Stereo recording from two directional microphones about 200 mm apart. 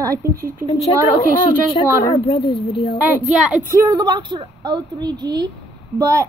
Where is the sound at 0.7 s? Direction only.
30° left (ahead or behind).